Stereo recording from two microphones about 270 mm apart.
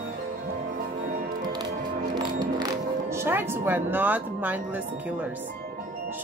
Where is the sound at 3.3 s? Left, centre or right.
Centre.